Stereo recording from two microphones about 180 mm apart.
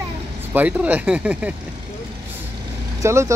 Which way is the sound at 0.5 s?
10° right (ahead or behind).